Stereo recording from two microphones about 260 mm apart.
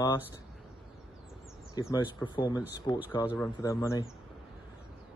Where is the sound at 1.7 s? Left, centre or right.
Centre.